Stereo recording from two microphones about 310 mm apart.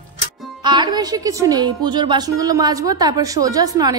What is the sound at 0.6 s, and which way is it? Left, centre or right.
A woman's voice, centre.